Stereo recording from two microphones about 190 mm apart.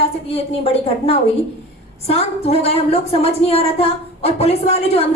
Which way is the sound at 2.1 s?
30° left (ahead or behind).